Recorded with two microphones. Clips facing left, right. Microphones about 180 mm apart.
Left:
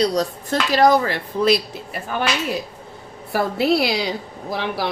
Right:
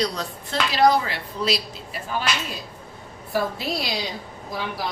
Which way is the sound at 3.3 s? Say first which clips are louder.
Left 7 dB; 65° left (ahead or behind).